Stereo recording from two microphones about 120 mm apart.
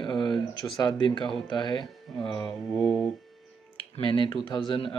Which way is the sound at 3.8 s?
45° left (ahead or behind).